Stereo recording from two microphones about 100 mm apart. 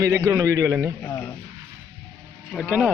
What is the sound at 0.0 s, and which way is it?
Speech, 35° right (ahead or behind).